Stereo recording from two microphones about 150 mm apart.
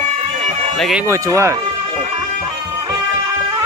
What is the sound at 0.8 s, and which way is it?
Speech, centre (ahead or behind).